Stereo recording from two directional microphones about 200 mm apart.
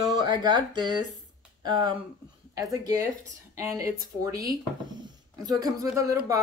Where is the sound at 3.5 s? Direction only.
15° right (ahead or behind).